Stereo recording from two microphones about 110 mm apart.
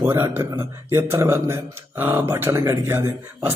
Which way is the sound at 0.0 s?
20° right (ahead or behind).